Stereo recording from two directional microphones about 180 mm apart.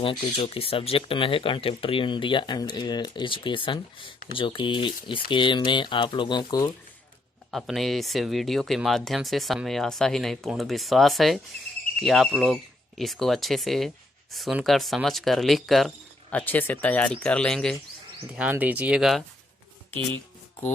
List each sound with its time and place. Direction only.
0.0 s speech: 30° left (ahead or behind)
7.5 s speech: centre (ahead or behind)
18.3 s speech: 10° right (ahead or behind)